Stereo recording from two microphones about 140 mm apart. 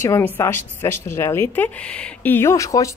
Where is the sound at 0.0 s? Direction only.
20° left (ahead or behind).